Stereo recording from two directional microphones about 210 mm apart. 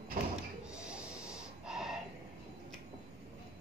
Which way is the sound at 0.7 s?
5° right (ahead or behind).